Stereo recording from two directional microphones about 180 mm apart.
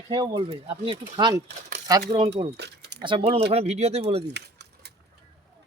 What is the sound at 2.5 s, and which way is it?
Speech, 70° right (ahead or behind).